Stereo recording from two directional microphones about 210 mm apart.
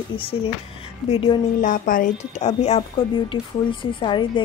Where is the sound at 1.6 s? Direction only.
40° left (ahead or behind).